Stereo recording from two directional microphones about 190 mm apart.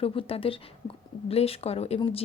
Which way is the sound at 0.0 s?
30° left (ahead or behind).